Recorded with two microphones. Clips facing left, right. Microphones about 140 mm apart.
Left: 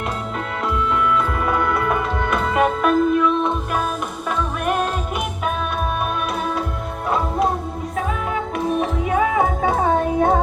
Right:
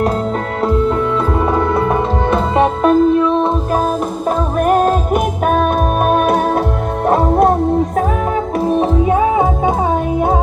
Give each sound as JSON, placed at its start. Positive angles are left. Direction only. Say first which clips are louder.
{"t": 0.6, "sound": "music", "louder": "right 6 dB", "side_deg": -35}
{"t": 4.3, "sound": "music", "louder": "right 8 dB", "side_deg": -40}
{"t": 8.5, "sound": "music", "louder": "right 7 dB", "side_deg": -30}